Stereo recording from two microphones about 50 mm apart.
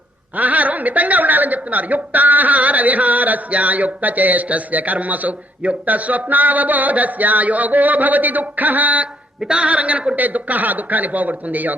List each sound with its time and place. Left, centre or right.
0.3 s a woman's voice: right